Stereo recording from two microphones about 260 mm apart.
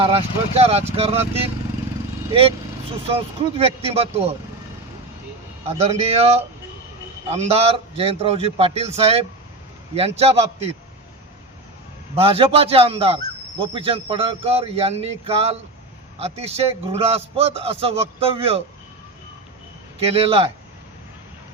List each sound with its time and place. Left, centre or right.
0.0 s a man's voice: right
3.6 s a man's voice: right
5.6 s a man's voice: right
12.1 s a man's voice: right
20.0 s a man's voice: right